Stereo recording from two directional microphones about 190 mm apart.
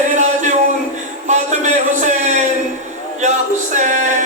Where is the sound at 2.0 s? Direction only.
40° right (ahead or behind).